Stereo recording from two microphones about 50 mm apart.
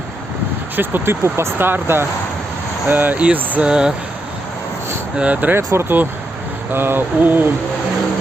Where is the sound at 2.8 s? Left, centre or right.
Right.